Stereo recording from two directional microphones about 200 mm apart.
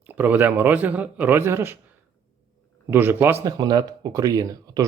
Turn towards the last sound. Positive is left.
turn(degrees=-20)  # may be behind; listen again after turning